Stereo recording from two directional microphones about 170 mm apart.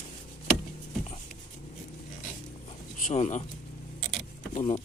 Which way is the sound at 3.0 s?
45° left (ahead or behind).